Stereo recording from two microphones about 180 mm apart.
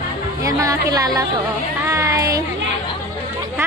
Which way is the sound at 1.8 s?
15° right (ahead or behind).